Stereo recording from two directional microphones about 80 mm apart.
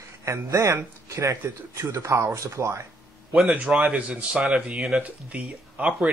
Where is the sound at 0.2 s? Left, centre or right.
Right.